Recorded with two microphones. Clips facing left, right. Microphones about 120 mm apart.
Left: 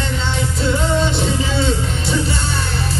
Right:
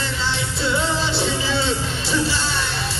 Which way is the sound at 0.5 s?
30° right (ahead or behind).